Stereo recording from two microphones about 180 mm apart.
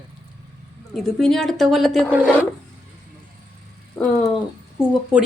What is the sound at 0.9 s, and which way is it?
Speech, centre (ahead or behind).